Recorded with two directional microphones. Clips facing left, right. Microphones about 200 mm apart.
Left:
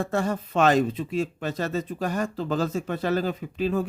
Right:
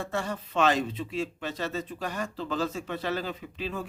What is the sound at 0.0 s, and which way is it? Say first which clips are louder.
Speech: left 6 dB; 45° left (ahead or behind).